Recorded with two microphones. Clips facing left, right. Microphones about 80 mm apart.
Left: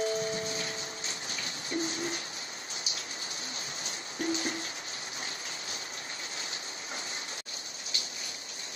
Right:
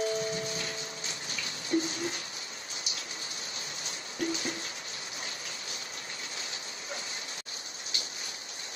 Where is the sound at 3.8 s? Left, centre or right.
Left.